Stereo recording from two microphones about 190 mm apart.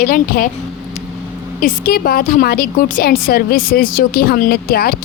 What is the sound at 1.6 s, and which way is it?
A woman's voice, 50° left (ahead or behind).